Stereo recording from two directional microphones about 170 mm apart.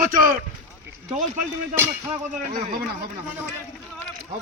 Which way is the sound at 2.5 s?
50° right (ahead or behind).